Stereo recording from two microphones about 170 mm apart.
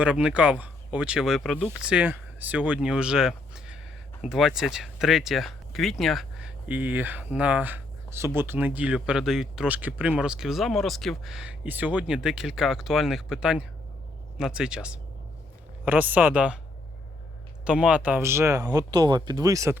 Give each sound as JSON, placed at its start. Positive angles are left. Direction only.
{"t": 0.0, "sound": "speech", "side_deg": -5}
{"t": 17.7, "sound": "speech", "side_deg": -5}